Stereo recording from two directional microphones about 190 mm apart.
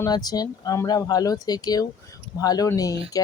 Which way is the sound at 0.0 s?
20° left (ahead or behind).